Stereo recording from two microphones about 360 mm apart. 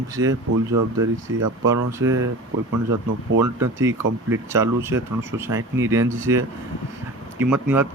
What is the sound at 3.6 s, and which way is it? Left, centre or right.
Speech, centre.